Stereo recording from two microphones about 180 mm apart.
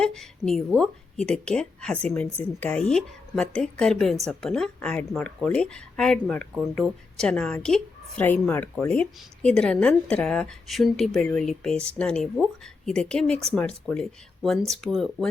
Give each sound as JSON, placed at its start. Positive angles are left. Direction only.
{"t": 0.0, "sound": "a woman's voice", "side_deg": 0}